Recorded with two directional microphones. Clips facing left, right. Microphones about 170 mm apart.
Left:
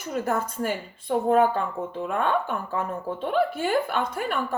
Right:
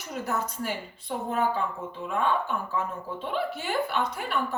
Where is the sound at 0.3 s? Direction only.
50° left (ahead or behind).